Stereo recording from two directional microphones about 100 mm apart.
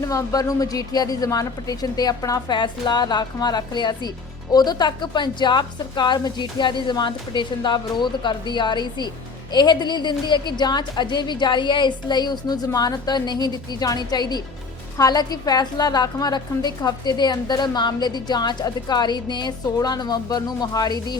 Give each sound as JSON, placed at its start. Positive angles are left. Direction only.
{"t": 0.0, "sound": "a woman's voice", "side_deg": 30}